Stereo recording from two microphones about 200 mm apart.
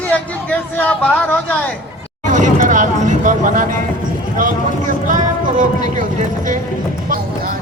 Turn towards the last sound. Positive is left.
turn(degrees=-40)  # may be behind; listen again after turning